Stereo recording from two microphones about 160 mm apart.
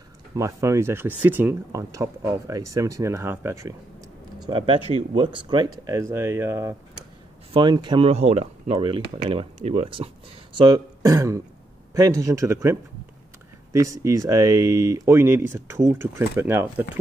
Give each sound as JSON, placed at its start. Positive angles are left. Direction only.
{"t": 0.4, "sound": "speech", "side_deg": -20}
{"t": 4.5, "sound": "speech", "side_deg": -30}
{"t": 7.5, "sound": "speech", "side_deg": -30}
{"t": 8.1, "sound": "speech", "side_deg": -40}
{"t": 10.5, "sound": "speech", "side_deg": -25}
{"t": 13.7, "sound": "speech", "side_deg": -20}